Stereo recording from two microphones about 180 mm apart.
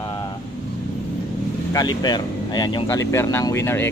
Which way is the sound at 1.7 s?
25° left (ahead or behind).